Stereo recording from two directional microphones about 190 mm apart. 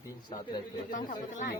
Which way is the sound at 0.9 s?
40° left (ahead or behind).